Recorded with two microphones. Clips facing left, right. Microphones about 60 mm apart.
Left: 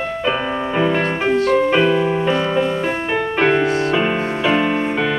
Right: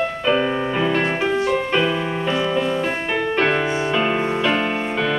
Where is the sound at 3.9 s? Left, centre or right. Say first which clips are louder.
Left 1 dB; centre.